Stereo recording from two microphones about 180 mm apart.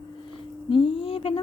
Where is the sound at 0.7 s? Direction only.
30° left (ahead or behind).